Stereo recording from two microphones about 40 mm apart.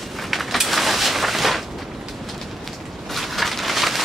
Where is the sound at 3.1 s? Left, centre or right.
Centre.